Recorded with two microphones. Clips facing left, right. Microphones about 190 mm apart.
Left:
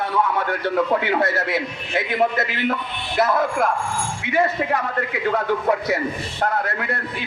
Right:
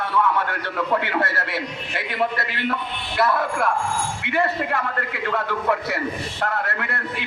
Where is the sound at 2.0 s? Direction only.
45° left (ahead or behind).